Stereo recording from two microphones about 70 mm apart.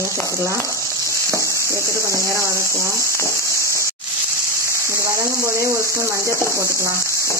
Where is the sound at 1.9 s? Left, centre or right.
Right.